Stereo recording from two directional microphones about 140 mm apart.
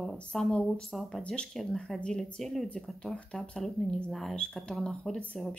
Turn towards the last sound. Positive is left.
turn(degrees=5)  # may be behind; listen again after turning